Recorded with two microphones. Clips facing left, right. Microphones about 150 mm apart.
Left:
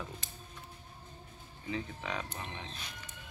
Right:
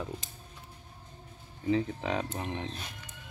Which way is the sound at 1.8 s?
55° right (ahead or behind).